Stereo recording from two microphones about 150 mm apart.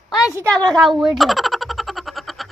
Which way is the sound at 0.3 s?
5° left (ahead or behind).